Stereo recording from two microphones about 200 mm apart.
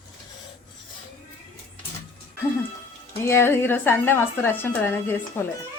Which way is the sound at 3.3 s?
10° left (ahead or behind).